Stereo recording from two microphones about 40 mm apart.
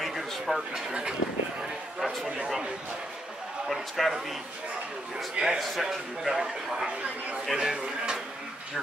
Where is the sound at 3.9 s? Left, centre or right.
Centre.